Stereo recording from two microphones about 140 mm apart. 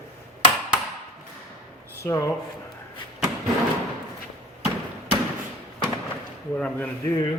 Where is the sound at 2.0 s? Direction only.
20° left (ahead or behind).